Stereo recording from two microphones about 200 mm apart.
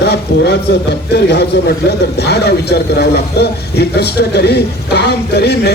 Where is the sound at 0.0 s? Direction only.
55° left (ahead or behind).